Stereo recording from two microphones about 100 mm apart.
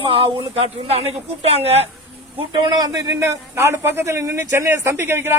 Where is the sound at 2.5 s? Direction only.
50° right (ahead or behind).